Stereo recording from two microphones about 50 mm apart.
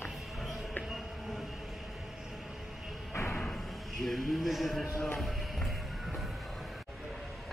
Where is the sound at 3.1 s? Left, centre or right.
Left.